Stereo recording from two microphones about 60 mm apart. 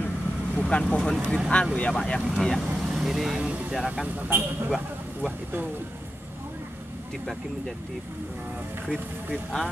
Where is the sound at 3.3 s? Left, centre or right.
Right.